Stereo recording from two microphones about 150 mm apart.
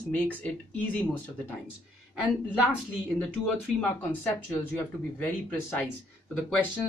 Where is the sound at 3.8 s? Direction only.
10° left (ahead or behind).